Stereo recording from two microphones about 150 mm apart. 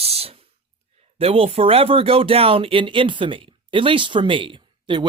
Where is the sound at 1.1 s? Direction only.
40° right (ahead or behind).